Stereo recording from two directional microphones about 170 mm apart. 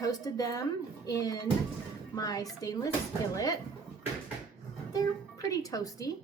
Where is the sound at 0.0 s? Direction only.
20° left (ahead or behind).